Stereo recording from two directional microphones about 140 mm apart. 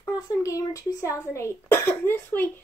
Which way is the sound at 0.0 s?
20° left (ahead or behind).